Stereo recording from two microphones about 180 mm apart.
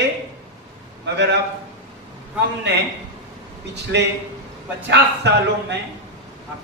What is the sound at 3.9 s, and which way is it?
A man's voice, 75° right (ahead or behind).